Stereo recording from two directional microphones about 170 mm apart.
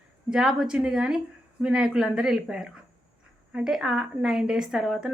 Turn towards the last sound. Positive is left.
turn(degrees=-5)  # may be behind; listen again after turning